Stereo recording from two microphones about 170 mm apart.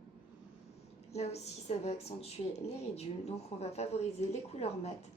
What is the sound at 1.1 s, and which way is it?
A woman's voice, 40° left (ahead or behind).